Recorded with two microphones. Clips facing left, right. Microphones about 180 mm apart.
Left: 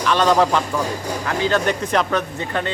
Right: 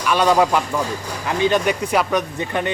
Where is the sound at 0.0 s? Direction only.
10° right (ahead or behind).